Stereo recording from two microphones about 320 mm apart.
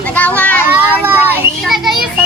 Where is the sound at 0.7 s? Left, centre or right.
Centre.